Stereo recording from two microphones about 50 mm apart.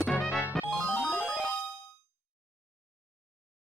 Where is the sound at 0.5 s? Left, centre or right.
Centre.